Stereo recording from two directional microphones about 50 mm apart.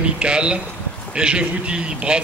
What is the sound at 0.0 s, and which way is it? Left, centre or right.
A man's voice, right.